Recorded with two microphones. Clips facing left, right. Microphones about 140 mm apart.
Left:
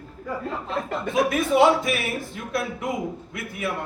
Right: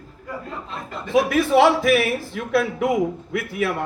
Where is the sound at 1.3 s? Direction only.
85° right.